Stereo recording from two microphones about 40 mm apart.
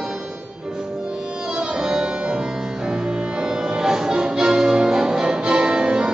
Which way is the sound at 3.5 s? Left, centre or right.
Centre.